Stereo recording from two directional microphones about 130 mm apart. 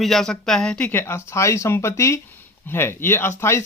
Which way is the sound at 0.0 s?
Centre (ahead or behind).